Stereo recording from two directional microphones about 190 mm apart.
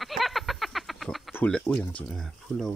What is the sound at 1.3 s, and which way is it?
Speech, 10° left (ahead or behind).